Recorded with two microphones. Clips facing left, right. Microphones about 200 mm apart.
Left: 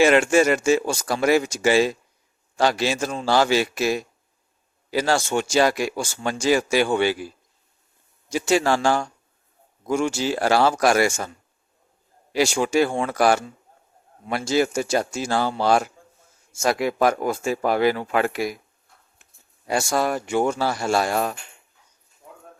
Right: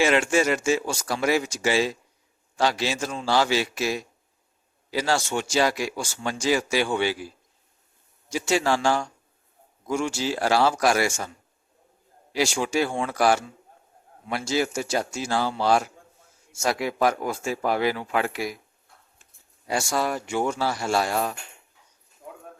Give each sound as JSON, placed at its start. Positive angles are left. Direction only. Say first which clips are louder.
{"t": 0.0, "sound": "speech", "louder": "left 5 dB", "side_deg": 50}
{"t": 8.3, "sound": "speech", "louder": "left 3 dB", "side_deg": 50}
{"t": 12.3, "sound": "speech", "louder": "left 4 dB", "side_deg": 50}